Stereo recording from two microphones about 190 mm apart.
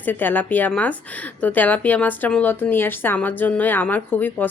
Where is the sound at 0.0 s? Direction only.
10° left (ahead or behind).